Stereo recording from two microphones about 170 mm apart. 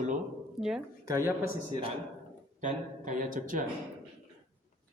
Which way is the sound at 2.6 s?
50° right (ahead or behind).